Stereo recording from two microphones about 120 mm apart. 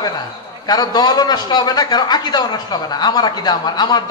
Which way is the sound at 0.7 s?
35° left (ahead or behind).